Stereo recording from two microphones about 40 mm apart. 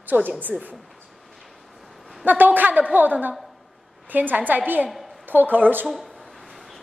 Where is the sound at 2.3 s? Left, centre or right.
Right.